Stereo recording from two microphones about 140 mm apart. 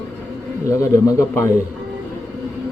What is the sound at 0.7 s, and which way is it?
Speech, 20° left (ahead or behind).